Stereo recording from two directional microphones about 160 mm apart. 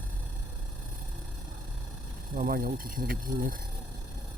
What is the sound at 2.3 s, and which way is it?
Speech, 65° right (ahead or behind).